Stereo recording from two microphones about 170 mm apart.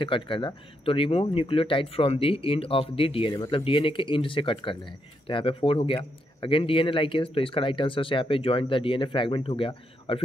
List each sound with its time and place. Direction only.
0.0 s speech: 30° left (ahead or behind)